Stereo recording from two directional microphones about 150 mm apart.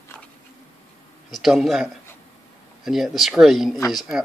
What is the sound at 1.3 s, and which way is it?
A man's voice, centre (ahead or behind).